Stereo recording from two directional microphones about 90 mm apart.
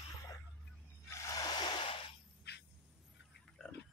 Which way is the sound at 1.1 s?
35° left (ahead or behind).